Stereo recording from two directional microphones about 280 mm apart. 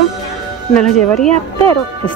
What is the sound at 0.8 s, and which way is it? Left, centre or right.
Speech, centre.